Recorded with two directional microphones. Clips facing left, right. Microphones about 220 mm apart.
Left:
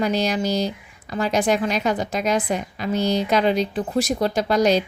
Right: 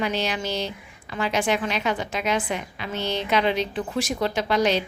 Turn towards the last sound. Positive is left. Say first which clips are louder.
# left 4 dB
turn(degrees=40)  # may be behind; listen again after turning